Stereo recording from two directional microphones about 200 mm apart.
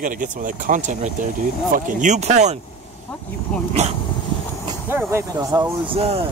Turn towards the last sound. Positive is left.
turn(degrees=-30)  # may be behind; listen again after turning